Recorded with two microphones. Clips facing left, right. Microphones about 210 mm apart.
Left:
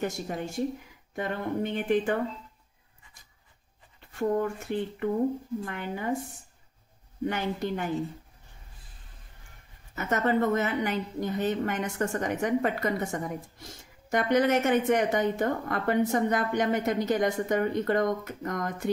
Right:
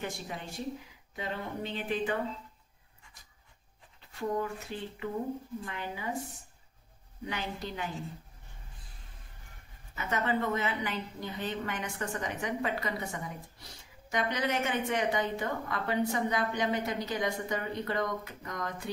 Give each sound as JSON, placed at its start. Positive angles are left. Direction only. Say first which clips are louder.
{"t": 0.0, "sound": "a woman's voice", "louder": "left 7 dB", "side_deg": 45}
{"t": 4.2, "sound": "a woman's voice", "louder": "left 6 dB", "side_deg": 50}
{"t": 7.2, "sound": "a woman's voice", "louder": "left 8 dB", "side_deg": 50}
{"t": 9.9, "sound": "a woman's voice", "louder": "left 6 dB", "side_deg": 45}